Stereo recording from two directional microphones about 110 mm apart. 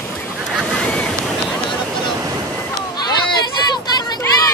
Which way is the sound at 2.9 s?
40° left (ahead or behind).